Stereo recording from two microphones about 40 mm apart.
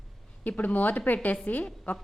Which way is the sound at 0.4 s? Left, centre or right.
Left.